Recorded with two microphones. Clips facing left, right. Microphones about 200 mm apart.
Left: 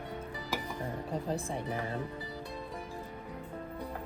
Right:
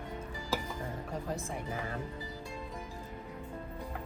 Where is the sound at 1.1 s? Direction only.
30° left (ahead or behind).